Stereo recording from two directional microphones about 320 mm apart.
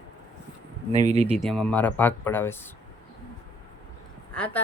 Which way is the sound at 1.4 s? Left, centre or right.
Centre.